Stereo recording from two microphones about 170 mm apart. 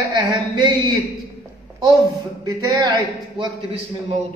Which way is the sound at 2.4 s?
20° right (ahead or behind).